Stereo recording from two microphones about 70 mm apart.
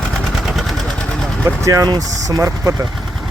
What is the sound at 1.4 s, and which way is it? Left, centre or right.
Speech, right.